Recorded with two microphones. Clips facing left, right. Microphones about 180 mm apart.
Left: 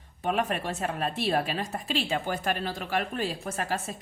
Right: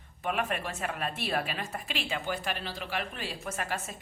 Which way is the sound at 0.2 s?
35° left (ahead or behind).